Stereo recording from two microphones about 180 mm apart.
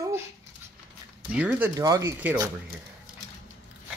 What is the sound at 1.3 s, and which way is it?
Speech, 10° right (ahead or behind).